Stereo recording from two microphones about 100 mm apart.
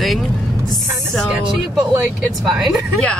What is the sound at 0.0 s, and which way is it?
Music, centre (ahead or behind).